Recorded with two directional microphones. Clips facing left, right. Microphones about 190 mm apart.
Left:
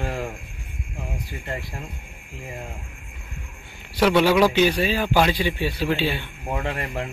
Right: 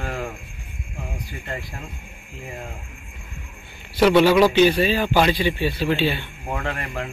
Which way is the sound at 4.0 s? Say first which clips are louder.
Right 3 dB; 5° right (ahead or behind).